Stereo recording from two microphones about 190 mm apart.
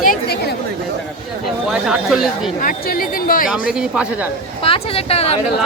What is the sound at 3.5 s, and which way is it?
Speech, 5° right (ahead or behind).